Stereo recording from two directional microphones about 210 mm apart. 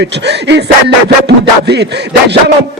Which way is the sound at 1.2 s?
55° right (ahead or behind).